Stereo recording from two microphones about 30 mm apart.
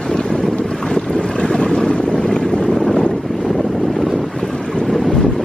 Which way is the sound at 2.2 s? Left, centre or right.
Centre.